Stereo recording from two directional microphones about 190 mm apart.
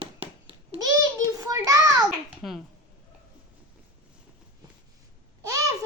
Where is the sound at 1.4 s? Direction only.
20° right (ahead or behind).